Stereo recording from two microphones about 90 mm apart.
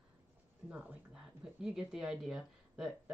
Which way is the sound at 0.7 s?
15° right (ahead or behind).